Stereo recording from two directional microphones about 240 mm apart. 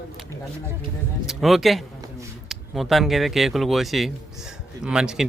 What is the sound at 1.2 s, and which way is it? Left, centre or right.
Speech, centre.